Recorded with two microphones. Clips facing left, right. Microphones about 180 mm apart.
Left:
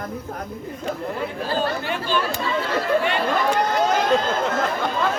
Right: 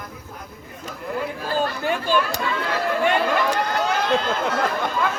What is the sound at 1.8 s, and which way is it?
Speech, 45° right (ahead or behind).